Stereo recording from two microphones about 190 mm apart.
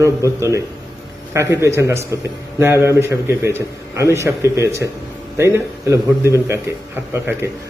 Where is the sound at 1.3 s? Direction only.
15° right (ahead or behind).